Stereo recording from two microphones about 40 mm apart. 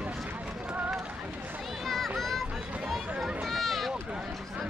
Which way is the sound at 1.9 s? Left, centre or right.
Centre.